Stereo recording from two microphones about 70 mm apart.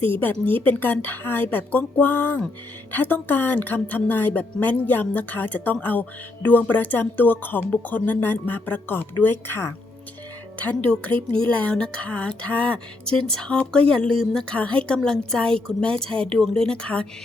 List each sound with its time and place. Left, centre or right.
0.1 s speech: left
10.6 s speech: centre